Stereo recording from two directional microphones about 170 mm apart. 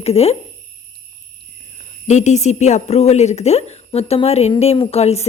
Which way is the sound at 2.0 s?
45° left (ahead or behind).